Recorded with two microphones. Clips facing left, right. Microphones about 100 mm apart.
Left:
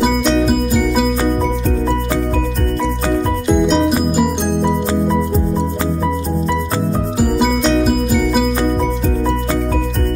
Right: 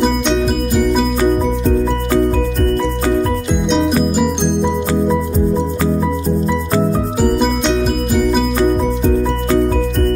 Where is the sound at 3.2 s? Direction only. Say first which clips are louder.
Left 3 dB; centre (ahead or behind).